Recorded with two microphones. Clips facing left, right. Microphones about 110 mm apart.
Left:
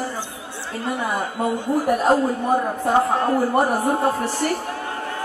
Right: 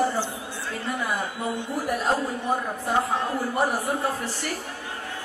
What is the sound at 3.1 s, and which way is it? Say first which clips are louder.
Speech: left 7 dB; 50° left (ahead or behind).